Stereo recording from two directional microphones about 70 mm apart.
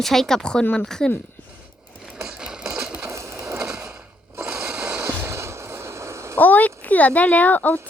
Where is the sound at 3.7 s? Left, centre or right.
Right.